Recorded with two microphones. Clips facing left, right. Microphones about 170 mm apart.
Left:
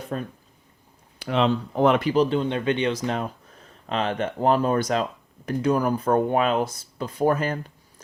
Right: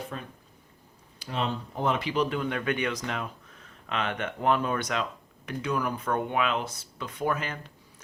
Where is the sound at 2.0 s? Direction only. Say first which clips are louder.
Left 7 dB; 40° left (ahead or behind).